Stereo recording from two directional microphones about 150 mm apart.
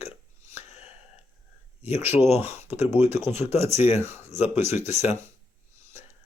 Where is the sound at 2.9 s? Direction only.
15° right (ahead or behind).